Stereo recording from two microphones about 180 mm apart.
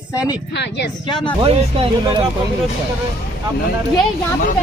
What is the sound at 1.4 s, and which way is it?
Speech, 30° right (ahead or behind).